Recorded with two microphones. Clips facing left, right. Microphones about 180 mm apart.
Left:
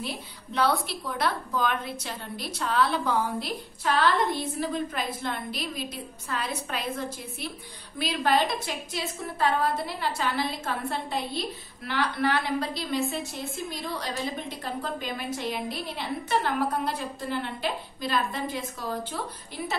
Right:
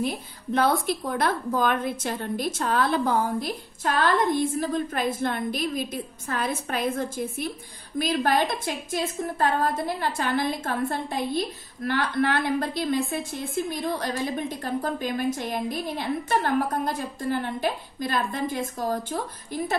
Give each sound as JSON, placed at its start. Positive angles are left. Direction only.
{"t": 0.0, "sound": "a woman's voice", "side_deg": -50}